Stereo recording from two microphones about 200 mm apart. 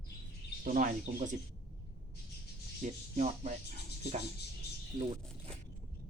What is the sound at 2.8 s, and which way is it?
Speech, 35° right (ahead or behind).